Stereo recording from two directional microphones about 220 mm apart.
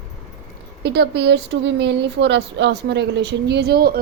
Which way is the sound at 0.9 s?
50° right (ahead or behind).